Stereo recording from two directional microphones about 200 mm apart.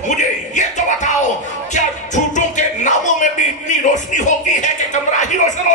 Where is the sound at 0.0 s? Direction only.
40° left (ahead or behind).